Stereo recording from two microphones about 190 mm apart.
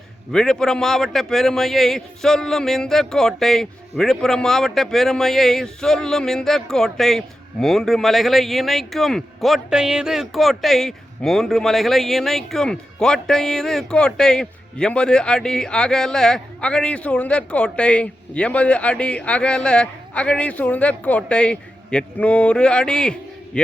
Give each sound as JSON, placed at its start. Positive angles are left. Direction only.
{"t": 0.3, "sound": "a man's voice", "side_deg": 0}